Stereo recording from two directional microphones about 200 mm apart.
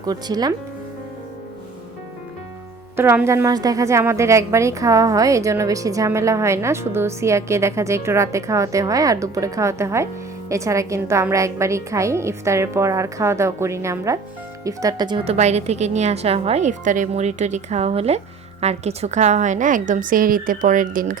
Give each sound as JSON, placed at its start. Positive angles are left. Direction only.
{"t": 0.0, "sound": "speech", "side_deg": -20}
{"t": 2.9, "sound": "a woman's voice", "side_deg": -10}